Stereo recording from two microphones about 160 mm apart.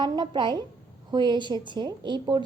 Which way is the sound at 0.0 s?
30° right (ahead or behind).